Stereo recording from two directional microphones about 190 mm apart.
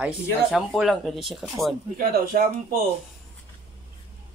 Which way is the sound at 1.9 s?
50° right (ahead or behind).